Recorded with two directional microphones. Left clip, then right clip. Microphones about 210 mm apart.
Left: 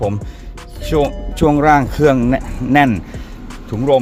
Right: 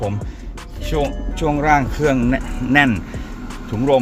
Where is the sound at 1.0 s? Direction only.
35° left (ahead or behind).